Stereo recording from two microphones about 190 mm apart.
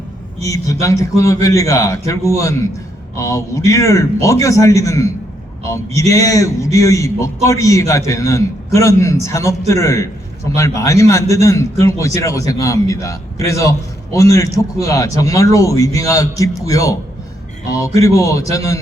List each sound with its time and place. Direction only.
0.4 s a man's voice: 15° left (ahead or behind)